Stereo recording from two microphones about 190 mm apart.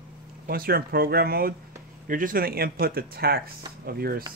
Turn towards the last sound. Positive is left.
turn(degrees=-55)  # may be behind; listen again after turning